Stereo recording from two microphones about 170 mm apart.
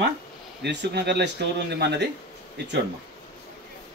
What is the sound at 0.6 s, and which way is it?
Speech, 85° right.